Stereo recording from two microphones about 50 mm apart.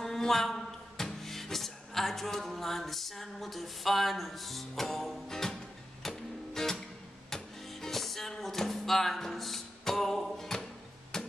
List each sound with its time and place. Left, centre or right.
0.0 s music: centre